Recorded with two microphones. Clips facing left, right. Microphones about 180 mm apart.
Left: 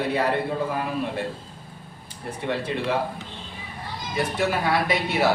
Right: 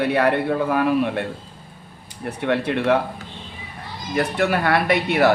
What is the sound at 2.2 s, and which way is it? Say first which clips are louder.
Speech: right 6 dB; 65° right (ahead or behind).